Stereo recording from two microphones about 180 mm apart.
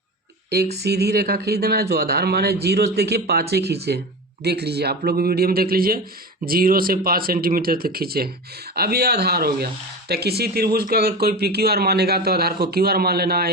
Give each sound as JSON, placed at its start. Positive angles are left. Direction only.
{"t": 0.5, "sound": "speech", "side_deg": -65}